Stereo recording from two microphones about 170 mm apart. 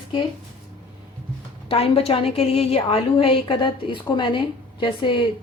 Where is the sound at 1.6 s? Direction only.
35° left (ahead or behind).